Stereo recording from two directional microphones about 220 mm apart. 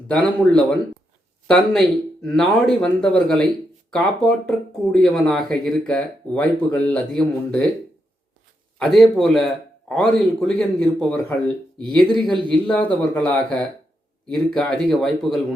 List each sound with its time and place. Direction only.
0.1 s speech: 5° left (ahead or behind)
8.8 s speech: centre (ahead or behind)